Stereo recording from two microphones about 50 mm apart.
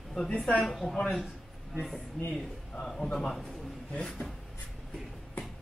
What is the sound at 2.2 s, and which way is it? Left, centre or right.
Speech, centre.